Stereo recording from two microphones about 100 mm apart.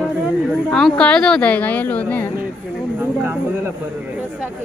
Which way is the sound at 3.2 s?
20° right (ahead or behind).